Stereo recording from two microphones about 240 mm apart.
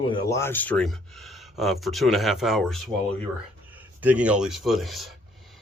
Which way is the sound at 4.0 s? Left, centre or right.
Centre.